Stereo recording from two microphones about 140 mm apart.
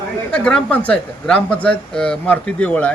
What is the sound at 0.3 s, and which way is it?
Speech, 5° left (ahead or behind).